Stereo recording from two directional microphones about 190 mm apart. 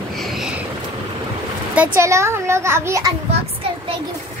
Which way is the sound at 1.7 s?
10° right (ahead or behind).